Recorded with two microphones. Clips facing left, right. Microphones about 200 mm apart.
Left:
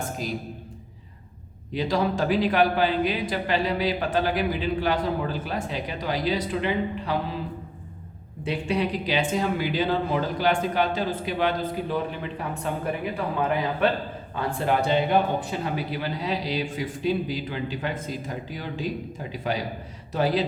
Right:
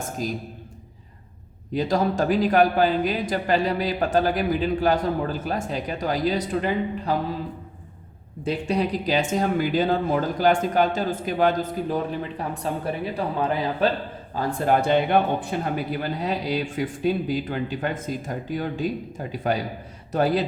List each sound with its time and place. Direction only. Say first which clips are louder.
1.7 s speech: right 2 dB; 45° right (ahead or behind)
8.4 s speech: right 2 dB; 40° right (ahead or behind)
14.3 s speech: right 3 dB; 50° right (ahead or behind)